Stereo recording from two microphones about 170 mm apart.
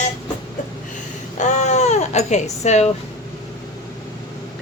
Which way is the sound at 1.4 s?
45° left (ahead or behind).